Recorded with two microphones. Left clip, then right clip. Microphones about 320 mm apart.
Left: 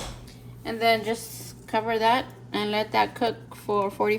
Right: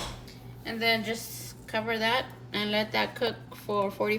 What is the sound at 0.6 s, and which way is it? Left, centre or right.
A woman's voice, centre.